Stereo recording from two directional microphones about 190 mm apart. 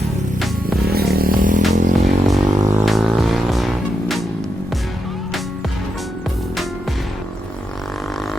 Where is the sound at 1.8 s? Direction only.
40° right (ahead or behind).